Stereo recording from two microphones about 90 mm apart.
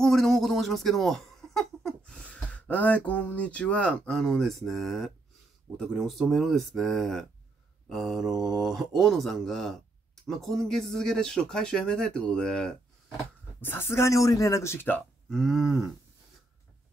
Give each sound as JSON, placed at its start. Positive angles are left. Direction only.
{"t": 0.0, "sound": "speech", "side_deg": 5}
{"t": 13.6, "sound": "speech", "side_deg": 25}
{"t": 15.2, "sound": "speech", "side_deg": 0}